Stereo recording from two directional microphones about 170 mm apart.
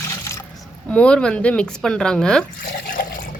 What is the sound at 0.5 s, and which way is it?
A woman's voice, 5° left (ahead or behind).